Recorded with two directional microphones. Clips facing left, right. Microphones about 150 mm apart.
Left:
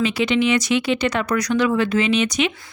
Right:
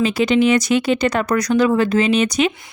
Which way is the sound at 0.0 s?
40° right (ahead or behind).